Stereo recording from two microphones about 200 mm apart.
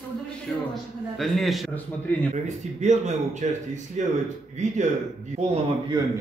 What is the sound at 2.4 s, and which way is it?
Speech, 35° right (ahead or behind).